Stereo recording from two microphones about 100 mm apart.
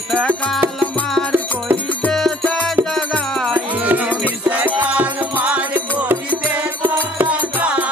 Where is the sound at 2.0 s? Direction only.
10° left (ahead or behind).